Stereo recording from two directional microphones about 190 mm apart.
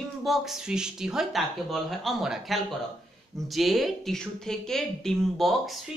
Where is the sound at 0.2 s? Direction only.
Centre (ahead or behind).